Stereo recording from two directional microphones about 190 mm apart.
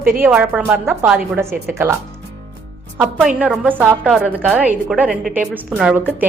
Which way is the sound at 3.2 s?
5° right (ahead or behind).